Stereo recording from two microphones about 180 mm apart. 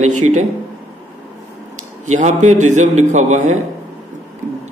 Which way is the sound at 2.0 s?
40° right (ahead or behind).